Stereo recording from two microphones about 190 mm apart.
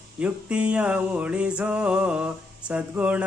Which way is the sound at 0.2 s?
5° right (ahead or behind).